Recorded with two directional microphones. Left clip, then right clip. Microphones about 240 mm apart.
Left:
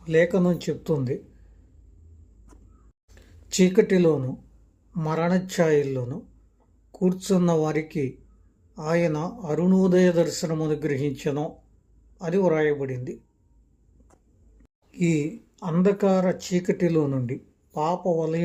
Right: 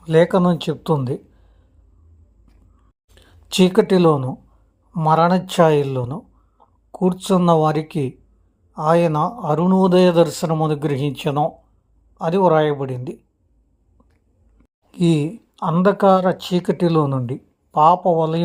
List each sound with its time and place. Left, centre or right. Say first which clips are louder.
0.0 s a man's voice: right 6 dB; right
3.2 s a man's voice: right 6 dB; right
14.9 s a man's voice: right 6 dB; right